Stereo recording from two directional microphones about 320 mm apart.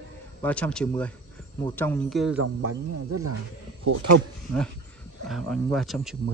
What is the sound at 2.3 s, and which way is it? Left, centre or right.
Speech, right.